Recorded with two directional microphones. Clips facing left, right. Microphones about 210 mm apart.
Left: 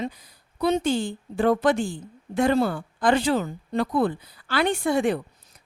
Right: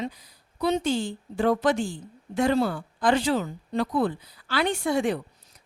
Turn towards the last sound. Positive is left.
turn(degrees=55)  # may be behind; listen again after turning